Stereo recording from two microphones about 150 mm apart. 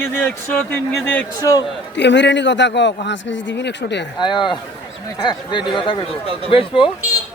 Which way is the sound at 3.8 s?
90° left.